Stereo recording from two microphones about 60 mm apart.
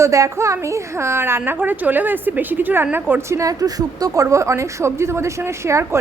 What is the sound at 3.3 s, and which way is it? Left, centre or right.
A woman's voice, right.